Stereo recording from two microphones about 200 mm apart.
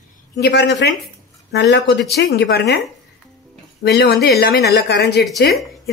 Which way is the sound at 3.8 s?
55° left (ahead or behind).